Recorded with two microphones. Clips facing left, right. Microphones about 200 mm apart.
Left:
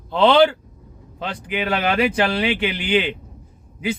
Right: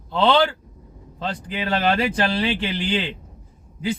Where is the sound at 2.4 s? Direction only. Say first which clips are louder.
Left 2 dB; 60° left (ahead or behind).